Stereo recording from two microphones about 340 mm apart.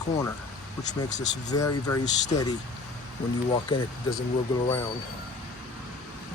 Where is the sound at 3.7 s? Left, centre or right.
Centre.